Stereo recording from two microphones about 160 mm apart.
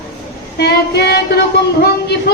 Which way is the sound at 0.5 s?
90° left.